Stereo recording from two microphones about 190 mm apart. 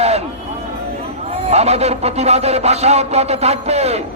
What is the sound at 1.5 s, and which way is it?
A man's voice, 35° right (ahead or behind).